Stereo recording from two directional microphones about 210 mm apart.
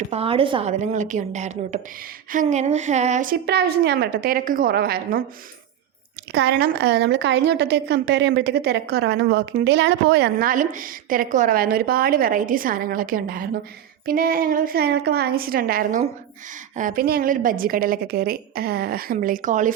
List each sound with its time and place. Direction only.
0.1 s a woman's voice: 25° right (ahead or behind); by 5.2 s 45° right (ahead or behind)
6.3 s a woman's voice: 50° right (ahead or behind)